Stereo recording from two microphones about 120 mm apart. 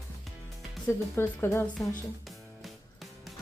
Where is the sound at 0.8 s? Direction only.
20° left (ahead or behind).